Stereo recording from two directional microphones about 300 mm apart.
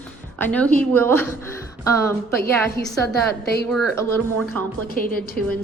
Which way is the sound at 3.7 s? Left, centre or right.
Centre.